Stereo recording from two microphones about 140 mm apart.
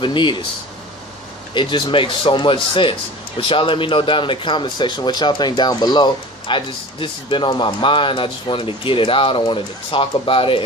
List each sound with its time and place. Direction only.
0.0 s speech: 35° left (ahead or behind)
1.5 s speech: 35° left (ahead or behind)